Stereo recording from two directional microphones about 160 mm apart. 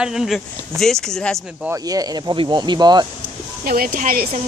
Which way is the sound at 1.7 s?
25° right (ahead or behind).